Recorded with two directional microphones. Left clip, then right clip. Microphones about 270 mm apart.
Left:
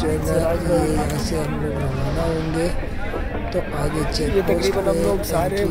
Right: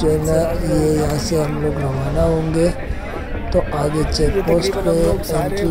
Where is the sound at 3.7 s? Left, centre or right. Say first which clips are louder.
Right 4 dB; centre.